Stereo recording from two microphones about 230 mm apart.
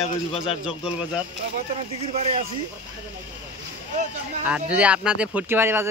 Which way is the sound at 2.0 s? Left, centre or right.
Right.